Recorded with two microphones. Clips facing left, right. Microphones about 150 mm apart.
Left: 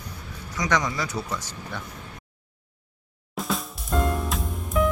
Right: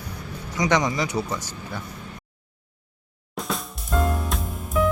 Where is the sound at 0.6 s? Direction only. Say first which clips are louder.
Right 4 dB; 20° right (ahead or behind).